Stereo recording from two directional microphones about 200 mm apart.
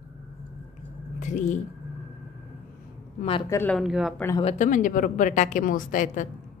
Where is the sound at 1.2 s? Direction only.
40° left (ahead or behind).